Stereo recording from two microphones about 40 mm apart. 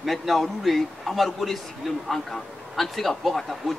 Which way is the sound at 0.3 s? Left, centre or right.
Centre.